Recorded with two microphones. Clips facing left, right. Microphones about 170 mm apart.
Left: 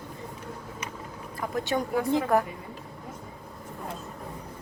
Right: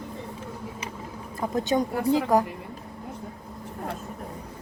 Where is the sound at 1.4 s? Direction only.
20° right (ahead or behind).